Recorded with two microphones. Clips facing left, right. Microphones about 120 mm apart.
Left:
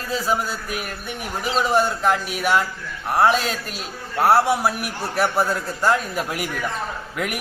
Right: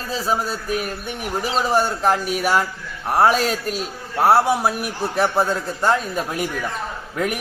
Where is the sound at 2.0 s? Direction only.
35° right (ahead or behind).